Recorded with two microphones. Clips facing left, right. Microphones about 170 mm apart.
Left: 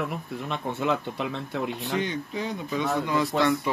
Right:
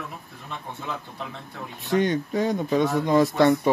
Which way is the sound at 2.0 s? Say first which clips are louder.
Right 7 dB; 45° right (ahead or behind).